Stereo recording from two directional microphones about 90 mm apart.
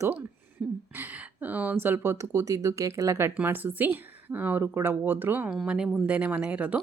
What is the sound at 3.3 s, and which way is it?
A woman's voice, 20° right (ahead or behind).